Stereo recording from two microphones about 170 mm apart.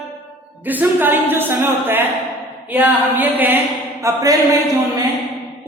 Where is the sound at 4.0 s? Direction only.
20° right (ahead or behind).